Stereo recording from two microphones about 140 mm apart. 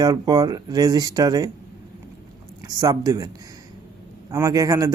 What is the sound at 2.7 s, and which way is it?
Speech, 25° right (ahead or behind).